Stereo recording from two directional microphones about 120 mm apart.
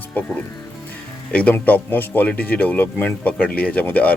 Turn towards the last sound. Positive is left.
turn(degrees=10)  # may be behind; listen again after turning